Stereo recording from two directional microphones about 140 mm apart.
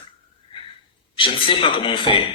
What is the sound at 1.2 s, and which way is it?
Speech, 40° left (ahead or behind).